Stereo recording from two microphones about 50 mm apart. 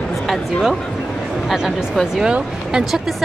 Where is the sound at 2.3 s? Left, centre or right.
Centre.